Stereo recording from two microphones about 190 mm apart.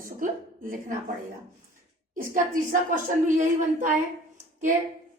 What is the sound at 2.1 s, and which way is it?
A woman's voice, 45° right (ahead or behind).